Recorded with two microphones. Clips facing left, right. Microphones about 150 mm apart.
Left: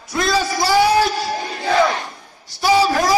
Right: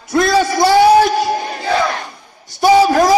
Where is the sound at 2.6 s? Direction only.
50° right (ahead or behind).